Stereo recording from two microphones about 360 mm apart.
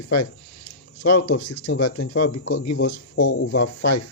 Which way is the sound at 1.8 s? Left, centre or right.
Left.